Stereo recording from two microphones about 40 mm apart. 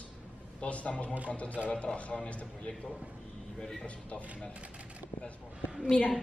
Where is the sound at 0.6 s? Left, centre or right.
Left.